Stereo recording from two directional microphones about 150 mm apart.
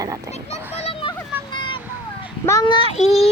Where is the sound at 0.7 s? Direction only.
40° left (ahead or behind).